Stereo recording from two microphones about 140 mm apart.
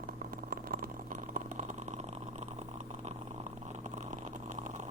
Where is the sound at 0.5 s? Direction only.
90° right; by 2.0 s 60° right (ahead or behind).